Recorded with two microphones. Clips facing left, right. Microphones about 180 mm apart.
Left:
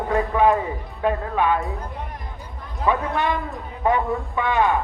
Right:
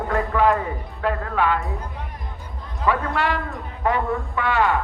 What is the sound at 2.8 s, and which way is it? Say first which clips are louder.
Speech: even; 20° left (ahead or behind).